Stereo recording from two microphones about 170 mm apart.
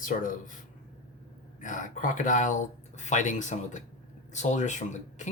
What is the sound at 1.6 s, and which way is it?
Speech, 50° left (ahead or behind).